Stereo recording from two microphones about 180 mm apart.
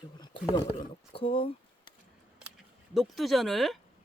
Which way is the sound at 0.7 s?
30° left (ahead or behind).